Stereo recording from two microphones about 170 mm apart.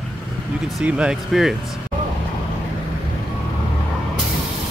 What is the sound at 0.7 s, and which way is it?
Speech, 5° right (ahead or behind).